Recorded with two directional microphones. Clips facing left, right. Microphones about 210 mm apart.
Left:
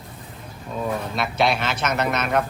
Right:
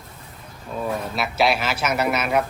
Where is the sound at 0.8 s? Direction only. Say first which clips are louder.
Even; 5° right (ahead or behind).